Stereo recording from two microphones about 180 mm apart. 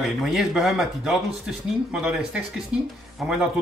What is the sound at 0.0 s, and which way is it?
Speech, centre (ahead or behind).